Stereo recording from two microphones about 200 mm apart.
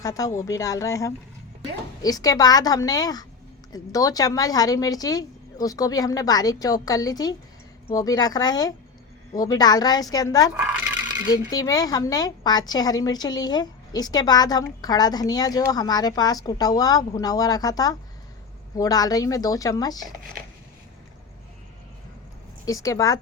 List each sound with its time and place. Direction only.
0.0 s a woman's voice: 15° left (ahead or behind)
10.5 s a sound: 5° right (ahead or behind)
11.3 s a woman's voice: 20° left (ahead or behind)
22.6 s a woman's voice: 15° left (ahead or behind)